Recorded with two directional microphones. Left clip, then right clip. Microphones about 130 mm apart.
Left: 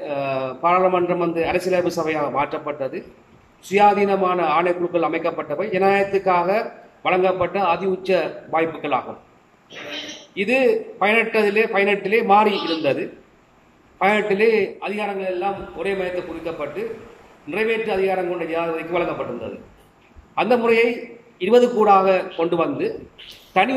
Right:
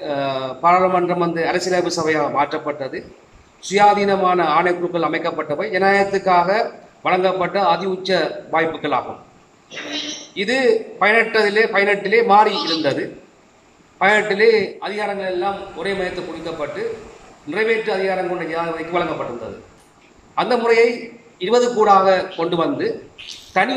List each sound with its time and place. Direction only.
0.0 s a man's voice: 5° left (ahead or behind)
10.3 s a man's voice: 10° left (ahead or behind)
20.3 s a man's voice: 15° left (ahead or behind)